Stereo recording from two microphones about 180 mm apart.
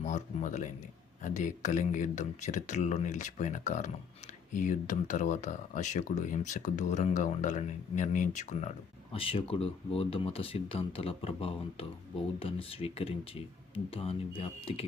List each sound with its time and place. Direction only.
0.0 s speech: 40° left (ahead or behind)